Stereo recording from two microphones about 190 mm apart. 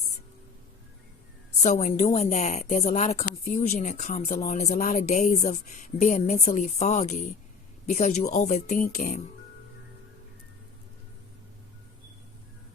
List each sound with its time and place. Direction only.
1.6 s speech: 40° left (ahead or behind)